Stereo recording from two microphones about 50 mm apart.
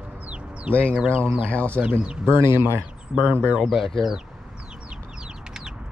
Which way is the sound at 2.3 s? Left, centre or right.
Right.